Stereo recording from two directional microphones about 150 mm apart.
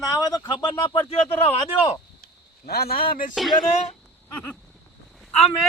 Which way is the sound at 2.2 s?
90° left.